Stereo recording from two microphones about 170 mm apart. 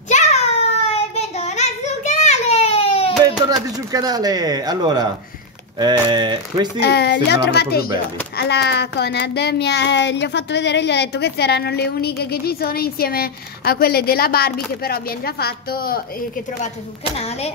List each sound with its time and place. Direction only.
0.1 s child singing: 40° left (ahead or behind)
3.3 s speech: 20° right (ahead or behind)
6.8 s a child's voice: 75° left (ahead or behind)